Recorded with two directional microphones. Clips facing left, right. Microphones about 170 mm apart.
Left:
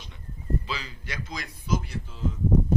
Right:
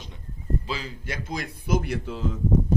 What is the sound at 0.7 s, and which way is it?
A man's voice, 50° right (ahead or behind).